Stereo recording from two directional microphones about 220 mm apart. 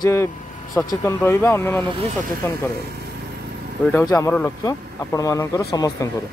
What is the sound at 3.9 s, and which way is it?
Speech, 10° left (ahead or behind).